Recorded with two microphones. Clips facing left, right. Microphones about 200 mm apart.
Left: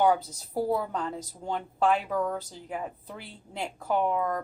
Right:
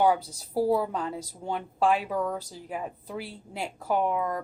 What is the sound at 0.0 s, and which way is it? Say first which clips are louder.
A woman's voice: even; 10° right (ahead or behind).